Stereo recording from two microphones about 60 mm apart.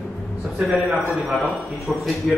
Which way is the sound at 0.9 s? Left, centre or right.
Centre.